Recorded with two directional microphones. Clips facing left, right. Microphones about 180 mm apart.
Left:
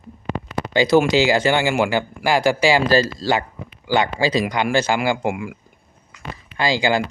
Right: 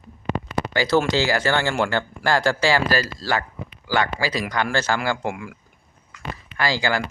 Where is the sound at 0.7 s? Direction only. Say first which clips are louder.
Left 5 dB; 15° left (ahead or behind).